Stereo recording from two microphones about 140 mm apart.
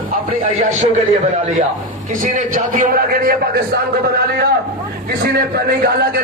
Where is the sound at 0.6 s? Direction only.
60° right (ahead or behind).